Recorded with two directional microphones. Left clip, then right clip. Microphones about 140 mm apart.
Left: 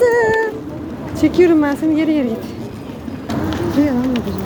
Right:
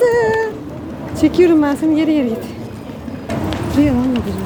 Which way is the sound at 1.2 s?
10° right (ahead or behind).